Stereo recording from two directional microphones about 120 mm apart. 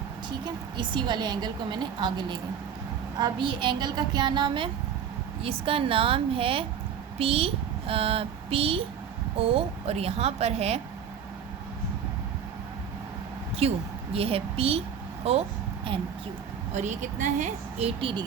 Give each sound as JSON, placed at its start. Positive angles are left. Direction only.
{"t": 0.8, "sound": "a woman's voice", "side_deg": -40}
{"t": 13.6, "sound": "a woman's voice", "side_deg": -55}
{"t": 16.7, "sound": "a woman's voice", "side_deg": -85}